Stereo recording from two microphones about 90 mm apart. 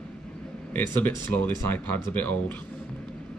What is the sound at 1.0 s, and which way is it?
Speech, 20° left (ahead or behind).